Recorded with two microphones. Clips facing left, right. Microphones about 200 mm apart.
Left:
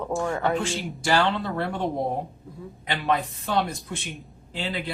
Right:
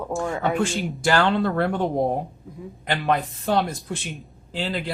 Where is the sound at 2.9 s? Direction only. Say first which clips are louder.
Right 2 dB; 45° right (ahead or behind).